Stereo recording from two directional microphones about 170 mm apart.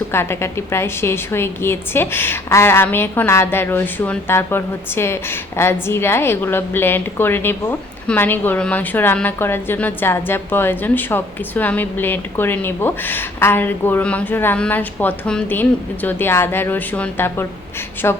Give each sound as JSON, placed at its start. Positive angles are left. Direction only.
{"t": 0.1, "sound": "a woman's voice", "side_deg": 15}